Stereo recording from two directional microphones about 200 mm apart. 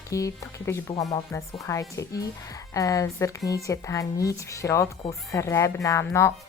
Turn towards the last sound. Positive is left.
turn(degrees=15)  # may be behind; listen again after turning